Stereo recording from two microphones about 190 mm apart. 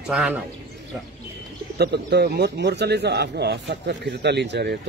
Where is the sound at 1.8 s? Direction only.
60° right (ahead or behind).